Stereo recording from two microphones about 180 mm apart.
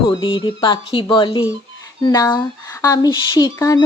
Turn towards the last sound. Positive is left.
turn(degrees=20)  # may be behind; listen again after turning